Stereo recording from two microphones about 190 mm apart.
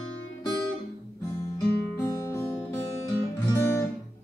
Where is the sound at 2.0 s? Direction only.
15° left (ahead or behind).